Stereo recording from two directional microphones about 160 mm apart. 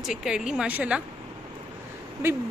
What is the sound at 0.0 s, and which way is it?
A woman's voice, 5° right (ahead or behind).